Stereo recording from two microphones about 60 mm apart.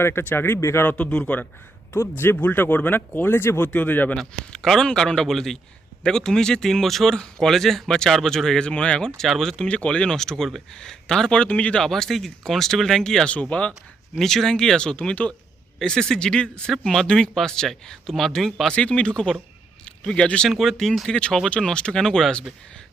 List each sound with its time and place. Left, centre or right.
0.0 s speech: left
0.6 s speech: left
0.9 s a man's voice: left
1.9 s speech: left
3.7 s a man's voice: left
4.2 s speech: centre
9.6 s speech: centre
11.8 s a man's voice: centre
14.2 s speech: centre
18.7 s speech: centre
20.5 s speech: centre
21.1 s speech: centre